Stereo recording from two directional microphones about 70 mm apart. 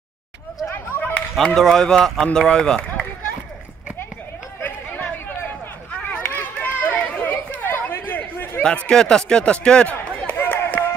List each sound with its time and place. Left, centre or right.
1.3 s speech: centre
6.0 s chatter: left
8.6 s speech: centre
10.1 s a sound: left